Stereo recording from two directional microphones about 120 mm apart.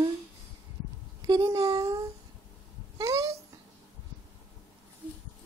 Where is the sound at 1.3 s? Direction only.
30° right (ahead or behind).